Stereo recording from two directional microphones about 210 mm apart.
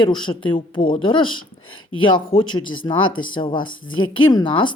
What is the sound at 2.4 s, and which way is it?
Speech, 75° left (ahead or behind).